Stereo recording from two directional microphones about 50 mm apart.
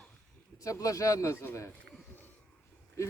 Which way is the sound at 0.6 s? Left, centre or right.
Left.